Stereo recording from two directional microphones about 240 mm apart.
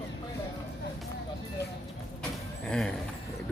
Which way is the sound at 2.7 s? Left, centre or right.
Centre.